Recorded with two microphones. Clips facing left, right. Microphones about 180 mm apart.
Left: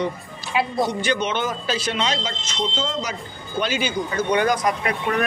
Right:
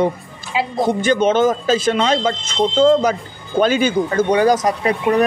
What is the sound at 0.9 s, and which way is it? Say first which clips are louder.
A woman's voice: right 8 dB; 50° right (ahead or behind).